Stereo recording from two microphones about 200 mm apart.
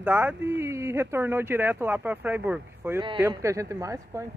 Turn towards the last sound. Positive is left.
turn(degrees=-15)  # may be behind; listen again after turning